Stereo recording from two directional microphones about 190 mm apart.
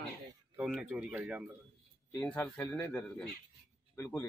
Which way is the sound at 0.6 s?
5° right (ahead or behind).